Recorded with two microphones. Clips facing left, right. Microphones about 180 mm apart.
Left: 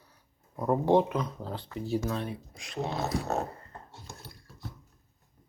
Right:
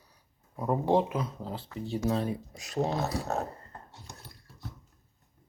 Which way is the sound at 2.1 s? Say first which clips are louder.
Right 4 dB; 35° right (ahead or behind).